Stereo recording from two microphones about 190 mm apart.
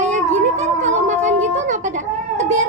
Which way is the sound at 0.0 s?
40° right (ahead or behind).